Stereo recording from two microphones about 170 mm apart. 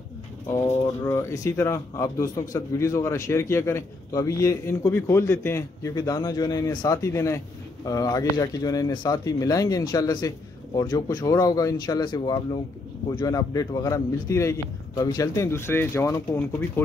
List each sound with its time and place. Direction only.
1.0 s a man's voice: 20° left (ahead or behind)